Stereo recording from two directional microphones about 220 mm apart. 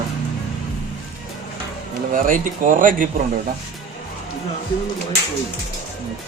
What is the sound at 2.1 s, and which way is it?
Speech, 40° right (ahead or behind).